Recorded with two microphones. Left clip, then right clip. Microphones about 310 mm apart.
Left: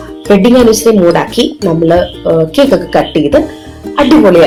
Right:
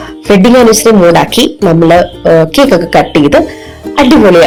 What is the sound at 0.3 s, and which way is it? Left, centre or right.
Speech, right.